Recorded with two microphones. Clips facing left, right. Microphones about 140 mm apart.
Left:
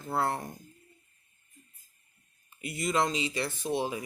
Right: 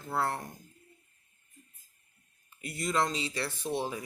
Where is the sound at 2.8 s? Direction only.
15° left (ahead or behind).